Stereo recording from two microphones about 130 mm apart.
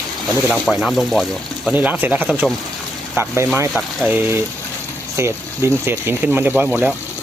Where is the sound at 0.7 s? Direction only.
5° right (ahead or behind).